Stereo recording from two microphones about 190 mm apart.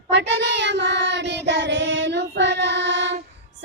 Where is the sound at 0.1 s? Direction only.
65° right (ahead or behind).